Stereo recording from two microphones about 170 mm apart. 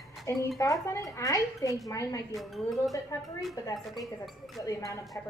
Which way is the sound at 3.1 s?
20° left (ahead or behind).